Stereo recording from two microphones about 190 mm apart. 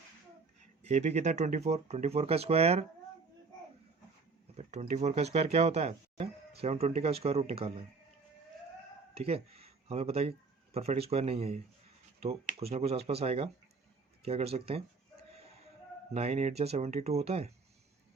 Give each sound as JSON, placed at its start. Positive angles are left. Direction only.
{"t": 0.8, "sound": "speech", "side_deg": -35}
{"t": 4.5, "sound": "speech", "side_deg": -35}
{"t": 9.1, "sound": "speech", "side_deg": -30}
{"t": 16.1, "sound": "speech", "side_deg": -35}